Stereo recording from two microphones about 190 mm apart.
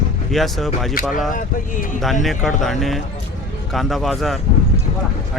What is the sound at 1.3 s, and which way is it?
Speech, 45° left (ahead or behind).